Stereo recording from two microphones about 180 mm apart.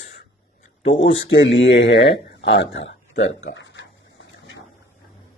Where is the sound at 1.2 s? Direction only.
90° left.